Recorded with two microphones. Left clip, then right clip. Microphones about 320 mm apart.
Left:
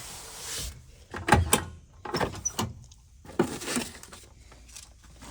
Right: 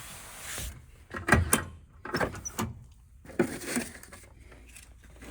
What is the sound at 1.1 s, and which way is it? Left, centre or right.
Door, centre.